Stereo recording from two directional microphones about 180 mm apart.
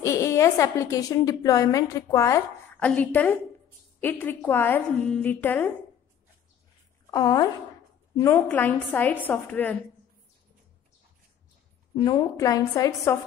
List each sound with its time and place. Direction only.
0.0 s a woman's voice: 15° left (ahead or behind)
7.1 s a woman's voice: 20° left (ahead or behind)
12.0 s a woman's voice: 20° left (ahead or behind)